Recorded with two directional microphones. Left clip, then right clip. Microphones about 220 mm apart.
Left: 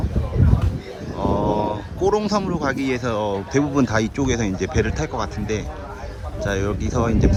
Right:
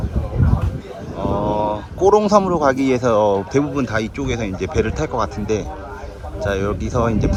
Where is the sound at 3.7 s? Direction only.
15° left (ahead or behind).